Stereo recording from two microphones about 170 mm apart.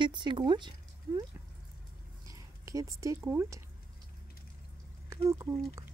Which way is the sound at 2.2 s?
20° right (ahead or behind).